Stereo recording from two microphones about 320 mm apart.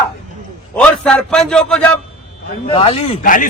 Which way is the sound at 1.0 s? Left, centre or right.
Centre.